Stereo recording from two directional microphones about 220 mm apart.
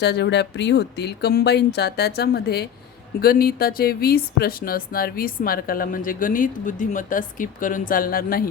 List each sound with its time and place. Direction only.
0.0 s speech: 50° left (ahead or behind)